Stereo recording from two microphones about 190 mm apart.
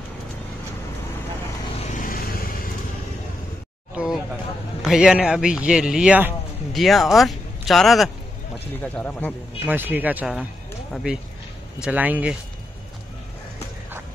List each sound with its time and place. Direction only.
1.8 s vehicle: 40° left (ahead or behind)
3.9 s a sound: 5° right (ahead or behind)
4.8 s speech: 5° right (ahead or behind)
9.7 s speech: 10° right (ahead or behind)